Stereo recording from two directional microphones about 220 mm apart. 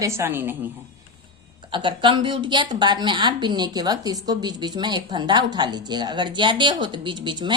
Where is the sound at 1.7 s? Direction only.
20° right (ahead or behind).